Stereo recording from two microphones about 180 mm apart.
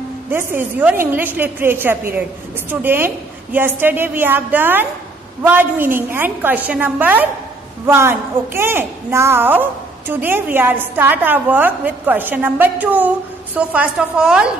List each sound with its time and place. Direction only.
0.3 s a woman's voice: 10° right (ahead or behind)